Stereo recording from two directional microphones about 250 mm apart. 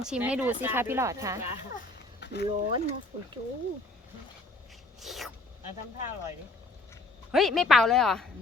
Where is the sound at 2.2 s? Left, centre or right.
Left.